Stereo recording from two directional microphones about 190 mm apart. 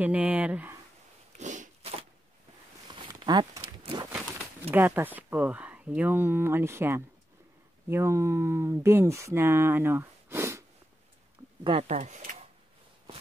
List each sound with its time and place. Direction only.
0.0 s speech: 10° right (ahead or behind)
1.4 s a sound: 40° right (ahead or behind)
2.9 s walk: 25° right (ahead or behind)
4.6 s speech: 10° right (ahead or behind)
11.6 s speech: 35° right (ahead or behind)